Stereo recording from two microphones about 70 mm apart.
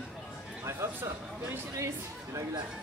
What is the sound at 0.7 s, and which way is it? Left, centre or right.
Speech, right.